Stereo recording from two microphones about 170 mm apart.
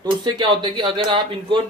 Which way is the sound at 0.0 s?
25° right (ahead or behind).